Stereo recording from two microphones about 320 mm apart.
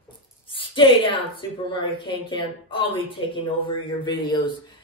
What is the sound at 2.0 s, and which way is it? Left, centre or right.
A woman's voice, centre.